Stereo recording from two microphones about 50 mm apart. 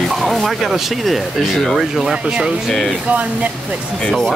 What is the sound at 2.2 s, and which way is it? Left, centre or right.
Speech, centre.